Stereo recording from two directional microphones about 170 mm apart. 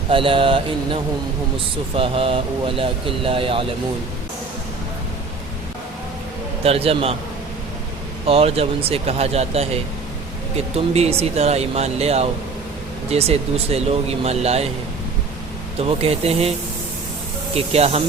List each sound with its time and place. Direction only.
0.1 s speech: 30° right (ahead or behind)
6.6 s speech: 35° right (ahead or behind)
8.3 s speech: 35° right (ahead or behind)
10.8 s speech: 40° right (ahead or behind)
15.8 s speech: 35° right (ahead or behind)
17.5 s speech: 35° right (ahead or behind)